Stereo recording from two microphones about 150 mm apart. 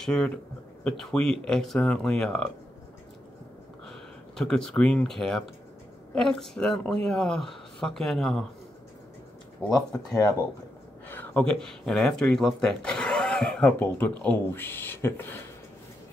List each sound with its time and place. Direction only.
0.0 s speech: 5° left (ahead or behind)
4.4 s speech: 5° left (ahead or behind)
9.8 s speech: 25° left (ahead or behind)
11.1 s speech: 10° left (ahead or behind)